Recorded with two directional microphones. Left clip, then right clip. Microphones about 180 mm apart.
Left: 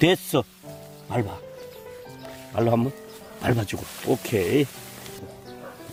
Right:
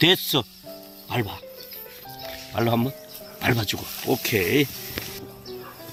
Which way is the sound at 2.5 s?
25° left (ahead or behind).